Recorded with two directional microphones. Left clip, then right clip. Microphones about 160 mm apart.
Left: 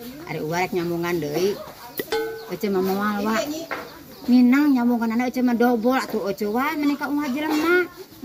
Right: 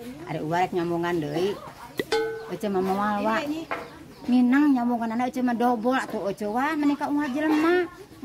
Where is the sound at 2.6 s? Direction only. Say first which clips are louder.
Left 2 dB; 25° right (ahead or behind).